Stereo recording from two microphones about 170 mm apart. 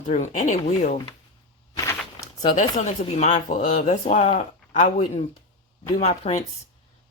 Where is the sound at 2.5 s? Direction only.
45° left (ahead or behind).